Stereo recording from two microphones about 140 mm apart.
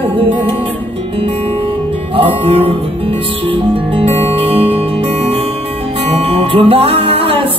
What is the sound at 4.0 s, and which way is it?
Music, 45° right (ahead or behind).